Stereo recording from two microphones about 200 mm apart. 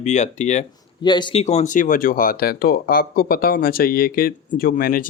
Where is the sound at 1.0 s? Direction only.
20° left (ahead or behind).